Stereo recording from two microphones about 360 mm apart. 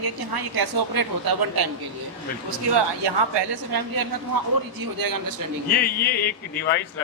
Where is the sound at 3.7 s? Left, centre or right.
Right.